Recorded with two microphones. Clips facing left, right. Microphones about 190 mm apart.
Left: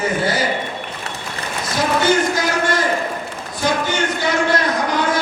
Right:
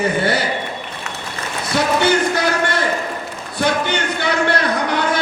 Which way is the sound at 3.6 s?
65° right (ahead or behind).